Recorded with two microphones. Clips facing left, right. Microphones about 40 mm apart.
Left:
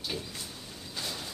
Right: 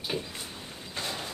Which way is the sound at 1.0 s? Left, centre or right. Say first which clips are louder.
Right 3 dB; right.